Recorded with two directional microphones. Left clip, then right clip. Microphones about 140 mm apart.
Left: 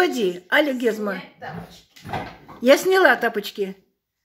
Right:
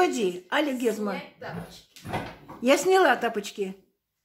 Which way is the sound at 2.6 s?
20° left (ahead or behind).